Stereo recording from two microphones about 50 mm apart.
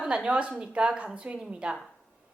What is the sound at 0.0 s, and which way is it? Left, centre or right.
Speech, centre.